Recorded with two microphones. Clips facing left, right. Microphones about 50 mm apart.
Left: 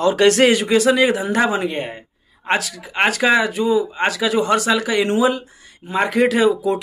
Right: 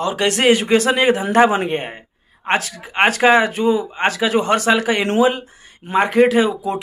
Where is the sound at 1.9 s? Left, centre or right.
Right.